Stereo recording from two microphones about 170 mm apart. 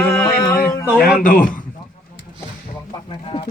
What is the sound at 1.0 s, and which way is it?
Speech, 55° left (ahead or behind).